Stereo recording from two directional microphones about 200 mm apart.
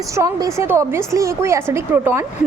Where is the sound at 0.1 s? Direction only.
15° right (ahead or behind).